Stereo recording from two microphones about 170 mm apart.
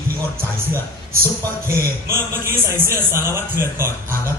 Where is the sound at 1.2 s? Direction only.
15° right (ahead or behind).